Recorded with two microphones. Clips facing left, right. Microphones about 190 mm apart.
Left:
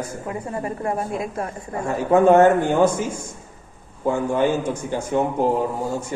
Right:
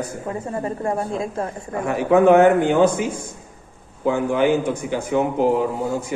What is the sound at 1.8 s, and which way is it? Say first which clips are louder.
A man's voice: right 1 dB; 60° right (ahead or behind).